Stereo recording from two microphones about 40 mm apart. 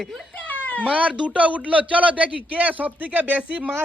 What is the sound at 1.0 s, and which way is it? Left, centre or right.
Speech, right.